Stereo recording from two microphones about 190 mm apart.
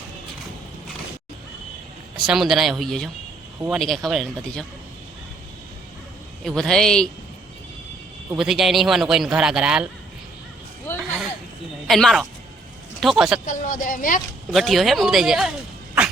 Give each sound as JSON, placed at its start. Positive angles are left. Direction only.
{"t": 2.1, "sound": "speech", "side_deg": 0}
{"t": 6.4, "sound": "speech", "side_deg": 5}
{"t": 8.3, "sound": "speech", "side_deg": 0}
{"t": 11.9, "sound": "speech", "side_deg": 0}
{"t": 13.4, "sound": "speech", "side_deg": 45}
{"t": 14.5, "sound": "speech", "side_deg": 0}